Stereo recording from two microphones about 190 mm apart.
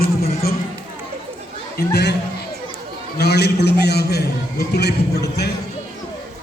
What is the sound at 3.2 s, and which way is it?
A man's voice, 60° left (ahead or behind).